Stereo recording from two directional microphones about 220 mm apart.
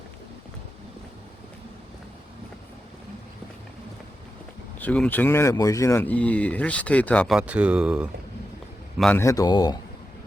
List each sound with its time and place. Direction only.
4.8 s speech: 5° left (ahead or behind)
9.0 s speech: 5° left (ahead or behind)